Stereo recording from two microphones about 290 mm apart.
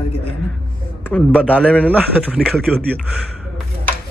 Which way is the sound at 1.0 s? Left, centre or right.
Centre.